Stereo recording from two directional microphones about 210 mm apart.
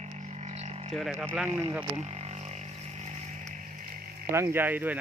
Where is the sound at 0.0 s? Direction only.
30° right (ahead or behind).